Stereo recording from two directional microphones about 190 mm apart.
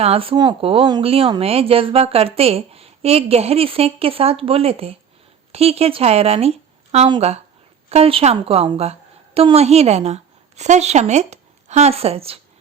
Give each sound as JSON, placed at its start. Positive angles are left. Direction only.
{"t": 0.0, "sound": "a woman's voice", "side_deg": -30}